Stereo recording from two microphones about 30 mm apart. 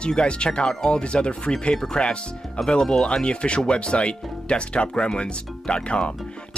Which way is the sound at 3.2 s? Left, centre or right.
Left.